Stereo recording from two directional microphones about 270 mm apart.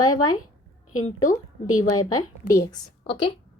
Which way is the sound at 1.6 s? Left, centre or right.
Left.